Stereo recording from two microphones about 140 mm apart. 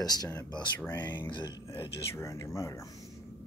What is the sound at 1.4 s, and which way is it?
Speech, 35° left (ahead or behind).